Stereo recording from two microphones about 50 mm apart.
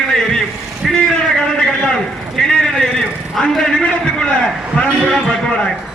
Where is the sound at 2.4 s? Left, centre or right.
Centre.